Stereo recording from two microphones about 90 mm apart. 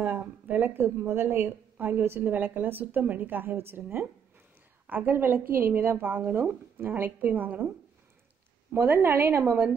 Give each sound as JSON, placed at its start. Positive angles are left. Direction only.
{"t": 0.0, "sound": "a woman's voice", "side_deg": -20}
{"t": 8.7, "sound": "a woman's voice", "side_deg": -25}